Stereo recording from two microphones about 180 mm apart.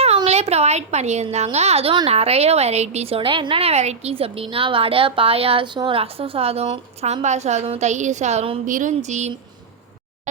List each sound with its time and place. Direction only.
0.3 s a woman's voice: 35° right (ahead or behind)